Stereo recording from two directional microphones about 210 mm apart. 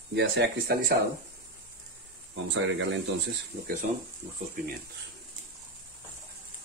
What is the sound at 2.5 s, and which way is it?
Speech, 65° right (ahead or behind).